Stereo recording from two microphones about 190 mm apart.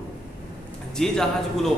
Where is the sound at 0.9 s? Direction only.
Centre (ahead or behind).